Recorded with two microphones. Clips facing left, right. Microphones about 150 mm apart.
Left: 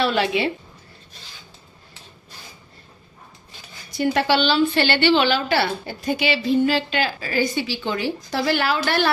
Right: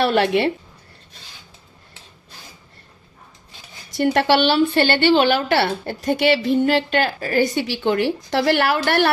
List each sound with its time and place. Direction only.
0.0 s a woman's voice: 55° right (ahead or behind)
4.0 s a woman's voice: 60° right (ahead or behind)